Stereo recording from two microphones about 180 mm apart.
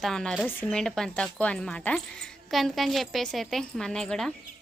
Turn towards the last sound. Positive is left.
turn(degrees=5)  # may be behind; listen again after turning